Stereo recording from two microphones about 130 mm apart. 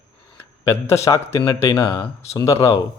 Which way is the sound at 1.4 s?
40° left (ahead or behind).